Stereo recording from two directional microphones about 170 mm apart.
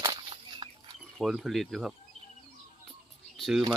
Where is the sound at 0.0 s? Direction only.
25° right (ahead or behind).